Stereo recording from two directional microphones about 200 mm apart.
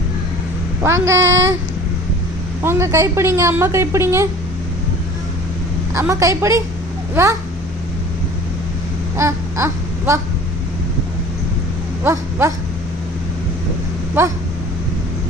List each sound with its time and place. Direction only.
0.8 s a woman's voice: 15° right (ahead or behind)
1.2 s speech: 75° right (ahead or behind)
2.6 s a woman's voice: 15° right (ahead or behind)
5.9 s a woman's voice: 15° right (ahead or behind)
9.1 s a sound: 15° right (ahead or behind)
12.0 s dog: 15° right (ahead or behind)
14.2 s a woman's voice: 10° right (ahead or behind)